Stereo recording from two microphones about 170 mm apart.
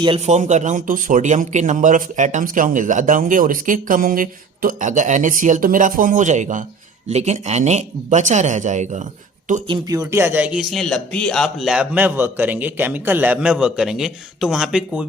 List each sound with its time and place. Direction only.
0.0 s speech: 35° right (ahead or behind)
9.6 s a man's voice: 25° right (ahead or behind); by 15.0 s 5° right (ahead or behind)